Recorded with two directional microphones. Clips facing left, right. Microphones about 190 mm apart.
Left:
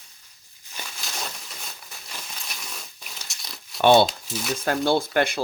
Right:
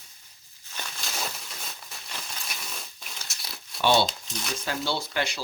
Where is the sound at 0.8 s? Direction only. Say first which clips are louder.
Even; centre (ahead or behind).